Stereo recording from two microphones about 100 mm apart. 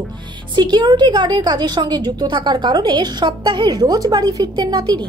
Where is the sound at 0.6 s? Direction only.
50° right (ahead or behind).